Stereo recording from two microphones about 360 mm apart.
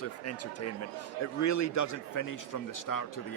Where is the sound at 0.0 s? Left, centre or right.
Left.